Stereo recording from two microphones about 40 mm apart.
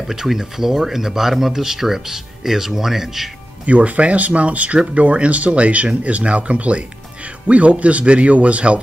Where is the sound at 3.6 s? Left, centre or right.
Right.